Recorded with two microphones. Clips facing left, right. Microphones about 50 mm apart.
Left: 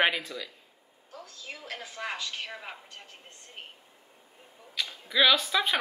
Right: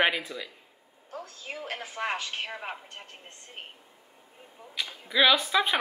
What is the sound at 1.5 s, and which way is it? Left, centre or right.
A woman's voice, right.